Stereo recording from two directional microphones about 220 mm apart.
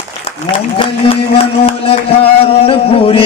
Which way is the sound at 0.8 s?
25° left (ahead or behind).